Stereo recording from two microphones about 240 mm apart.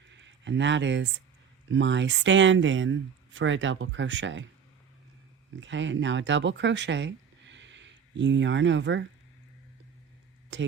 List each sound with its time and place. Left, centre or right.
0.2 s speech: right
5.5 s speech: right
10.5 s speech: right